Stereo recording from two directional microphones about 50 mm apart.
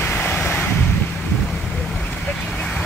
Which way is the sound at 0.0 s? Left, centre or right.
Left.